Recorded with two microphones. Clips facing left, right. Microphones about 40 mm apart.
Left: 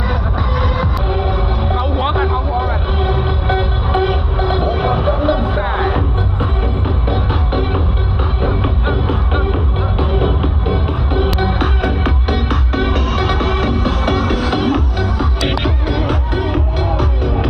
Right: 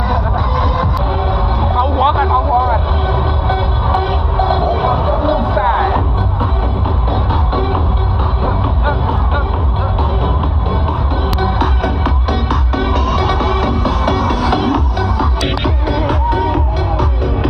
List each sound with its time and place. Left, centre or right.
0.1 s music: left
0.8 s music: centre
1.3 s vehicle: centre
3.0 s music: left
5.5 s music: centre
7.1 s music: centre
10.0 s music: left
12.7 s music: centre